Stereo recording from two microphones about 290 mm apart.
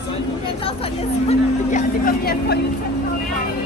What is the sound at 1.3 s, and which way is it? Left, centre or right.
Speech, left.